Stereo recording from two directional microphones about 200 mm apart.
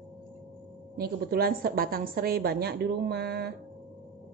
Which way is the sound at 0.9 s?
50° right (ahead or behind).